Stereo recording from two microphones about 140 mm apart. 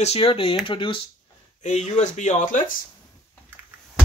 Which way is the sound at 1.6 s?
55° left (ahead or behind).